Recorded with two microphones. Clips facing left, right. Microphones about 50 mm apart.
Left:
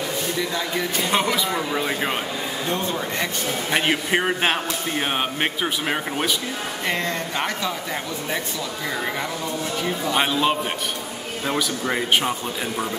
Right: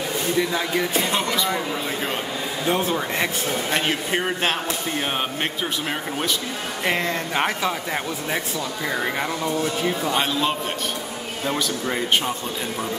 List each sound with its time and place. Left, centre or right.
0.4 s speech: centre
1.1 s speech: centre
2.6 s speech: centre
3.7 s speech: centre
6.9 s speech: centre
10.1 s speech: centre